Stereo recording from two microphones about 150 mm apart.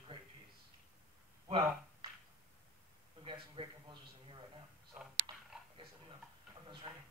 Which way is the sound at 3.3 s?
35° right (ahead or behind).